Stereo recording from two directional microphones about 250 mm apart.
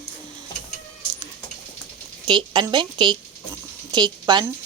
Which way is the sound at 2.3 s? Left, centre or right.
Centre.